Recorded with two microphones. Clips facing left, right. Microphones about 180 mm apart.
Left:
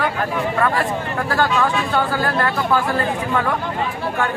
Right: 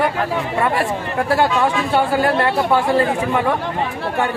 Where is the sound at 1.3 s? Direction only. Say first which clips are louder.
Right 2 dB; 25° right (ahead or behind).